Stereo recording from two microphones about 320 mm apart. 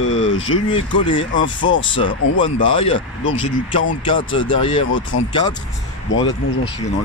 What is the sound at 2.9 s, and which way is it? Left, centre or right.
Speech, left.